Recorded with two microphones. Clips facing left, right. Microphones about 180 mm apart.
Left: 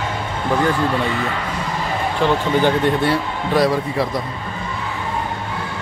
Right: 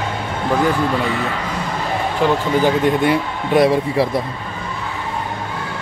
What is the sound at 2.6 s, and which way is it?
A man's voice, 15° right (ahead or behind).